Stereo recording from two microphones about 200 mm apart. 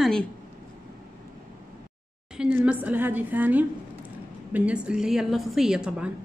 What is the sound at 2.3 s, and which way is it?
A woman's voice, 5° right (ahead or behind).